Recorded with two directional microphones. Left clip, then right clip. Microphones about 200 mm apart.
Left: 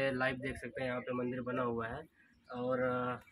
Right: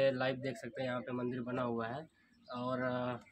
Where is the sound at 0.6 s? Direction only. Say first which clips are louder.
Left 1 dB; 55° right (ahead or behind).